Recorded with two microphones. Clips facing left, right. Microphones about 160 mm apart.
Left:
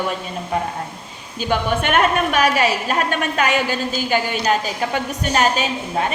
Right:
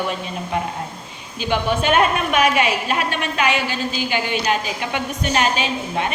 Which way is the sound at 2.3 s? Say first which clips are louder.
Even; 40° left (ahead or behind).